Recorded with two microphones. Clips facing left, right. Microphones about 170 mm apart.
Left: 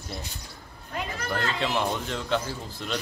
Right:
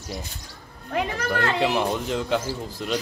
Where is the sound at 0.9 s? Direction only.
65° right (ahead or behind).